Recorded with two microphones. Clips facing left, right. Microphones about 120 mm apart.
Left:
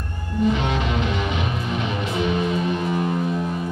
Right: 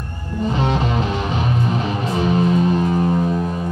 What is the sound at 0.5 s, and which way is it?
Music, 35° right (ahead or behind).